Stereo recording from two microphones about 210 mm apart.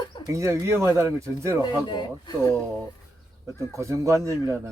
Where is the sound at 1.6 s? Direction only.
20° left (ahead or behind).